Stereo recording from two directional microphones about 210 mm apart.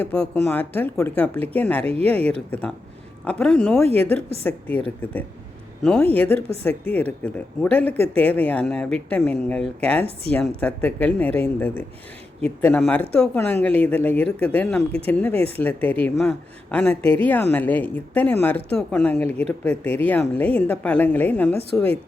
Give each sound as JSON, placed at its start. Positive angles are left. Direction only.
{"t": 0.0, "sound": "a woman's voice", "side_deg": 5}
{"t": 1.8, "sound": "speech", "side_deg": -30}
{"t": 2.5, "sound": "a woman's voice", "side_deg": 5}
{"t": 5.8, "sound": "a woman's voice", "side_deg": 5}